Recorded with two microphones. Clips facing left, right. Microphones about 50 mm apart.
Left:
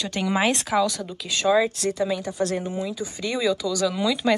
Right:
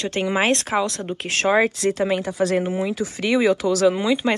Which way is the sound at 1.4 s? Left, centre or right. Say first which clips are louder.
Right 2 dB; right.